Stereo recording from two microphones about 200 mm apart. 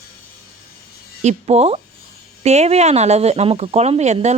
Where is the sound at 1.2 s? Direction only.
35° right (ahead or behind).